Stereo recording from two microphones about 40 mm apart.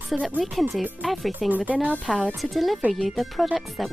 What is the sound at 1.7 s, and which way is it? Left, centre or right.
Speech, right.